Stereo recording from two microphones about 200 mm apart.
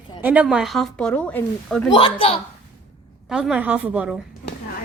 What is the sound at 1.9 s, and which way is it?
Speech, 25° left (ahead or behind).